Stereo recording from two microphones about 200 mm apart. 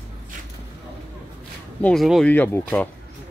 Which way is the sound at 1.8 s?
Centre (ahead or behind).